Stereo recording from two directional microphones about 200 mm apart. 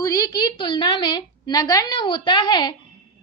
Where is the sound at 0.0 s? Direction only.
15° left (ahead or behind).